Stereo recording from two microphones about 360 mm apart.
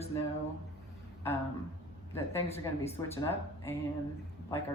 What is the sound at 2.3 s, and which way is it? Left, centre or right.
A woman's voice, centre.